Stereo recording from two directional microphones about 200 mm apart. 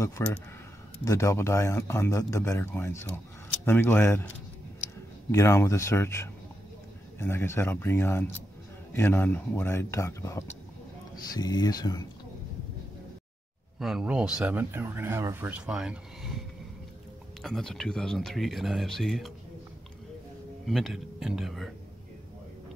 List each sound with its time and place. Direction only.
0.2 s speech: 15° left (ahead or behind)
5.3 s speech: 15° left (ahead or behind)
13.7 s speech: centre (ahead or behind)
20.6 s speech: centre (ahead or behind)